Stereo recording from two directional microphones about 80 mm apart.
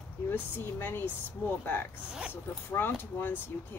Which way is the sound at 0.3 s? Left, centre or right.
Left.